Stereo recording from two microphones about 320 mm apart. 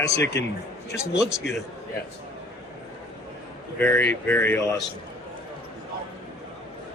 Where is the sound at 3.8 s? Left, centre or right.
Centre.